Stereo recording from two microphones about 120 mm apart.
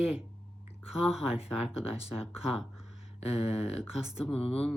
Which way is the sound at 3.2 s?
60° left (ahead or behind).